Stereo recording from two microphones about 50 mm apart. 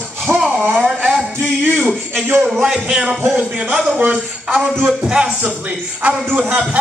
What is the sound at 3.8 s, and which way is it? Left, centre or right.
Speech, right.